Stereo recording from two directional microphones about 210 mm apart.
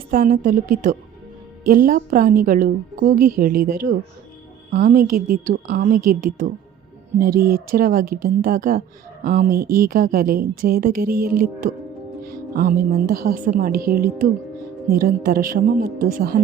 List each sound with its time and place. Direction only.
0.1 s a woman's voice: 40° right (ahead or behind)